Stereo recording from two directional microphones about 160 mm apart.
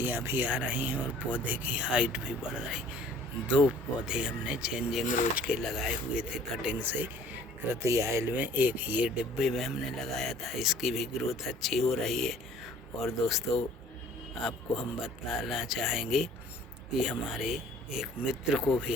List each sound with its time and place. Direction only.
0.0 s speech: 15° right (ahead or behind)
4.0 s speech: 5° right (ahead or behind)
5.0 s speech: 55° left (ahead or behind)
5.4 s speech: 5° right (ahead or behind)